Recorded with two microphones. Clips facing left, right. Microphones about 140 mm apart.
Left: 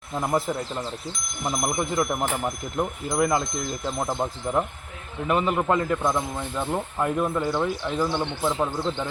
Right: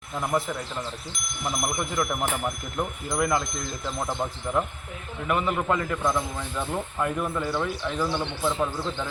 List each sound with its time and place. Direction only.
0.2 s a man's voice: 25° left (ahead or behind)